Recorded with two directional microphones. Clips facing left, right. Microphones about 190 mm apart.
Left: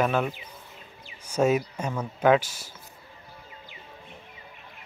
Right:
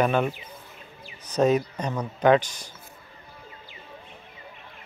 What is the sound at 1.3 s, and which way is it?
Speech, 10° left (ahead or behind).